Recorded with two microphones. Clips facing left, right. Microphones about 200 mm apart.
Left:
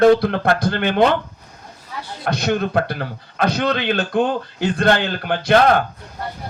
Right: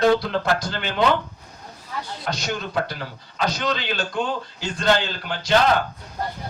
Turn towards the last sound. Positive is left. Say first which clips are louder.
# left 5 dB
turn(degrees=55)  # may be behind; listen again after turning